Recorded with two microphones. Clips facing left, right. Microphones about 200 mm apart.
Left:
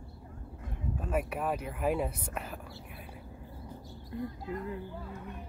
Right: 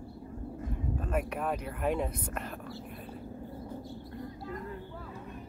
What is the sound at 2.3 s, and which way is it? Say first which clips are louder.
Whispering: right 2 dB; 5° left (ahead or behind).